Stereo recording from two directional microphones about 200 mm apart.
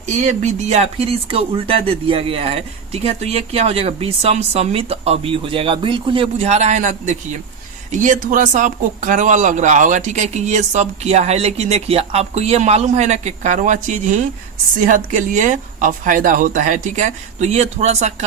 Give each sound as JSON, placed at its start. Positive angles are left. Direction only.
{"t": 0.0, "sound": "speech", "side_deg": -35}